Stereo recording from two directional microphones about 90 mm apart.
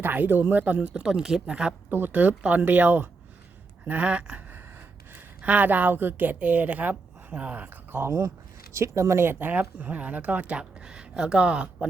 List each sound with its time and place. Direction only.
0.0 s speech: 20° right (ahead or behind)
1.9 s speech: 25° right (ahead or behind)
3.8 s a sound: 15° right (ahead or behind)
5.1 s a woman's voice: 15° right (ahead or behind)